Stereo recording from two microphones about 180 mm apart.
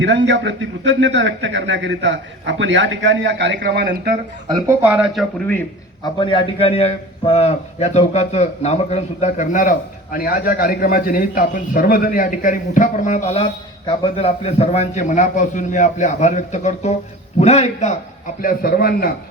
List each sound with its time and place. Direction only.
0.0 s a man's voice: 90° right; by 3.9 s 65° right (ahead or behind)
4.4 s speech: 25° right (ahead or behind)
4.8 s speech: 10° right (ahead or behind)
6.1 s a man's voice: 30° left (ahead or behind)
18.4 s a man's voice: 55° left (ahead or behind)